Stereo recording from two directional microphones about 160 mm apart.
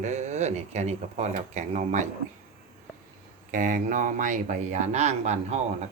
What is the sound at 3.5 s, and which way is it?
Speech, 55° right (ahead or behind).